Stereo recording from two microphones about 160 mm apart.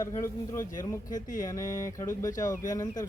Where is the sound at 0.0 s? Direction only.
20° left (ahead or behind).